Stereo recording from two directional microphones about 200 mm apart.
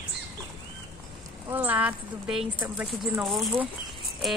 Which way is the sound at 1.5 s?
10° right (ahead or behind).